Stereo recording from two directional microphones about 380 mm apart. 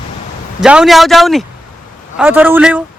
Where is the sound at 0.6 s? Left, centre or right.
Centre.